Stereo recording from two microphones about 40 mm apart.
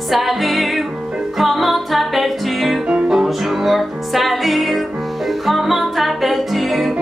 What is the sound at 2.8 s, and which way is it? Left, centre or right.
Music, centre.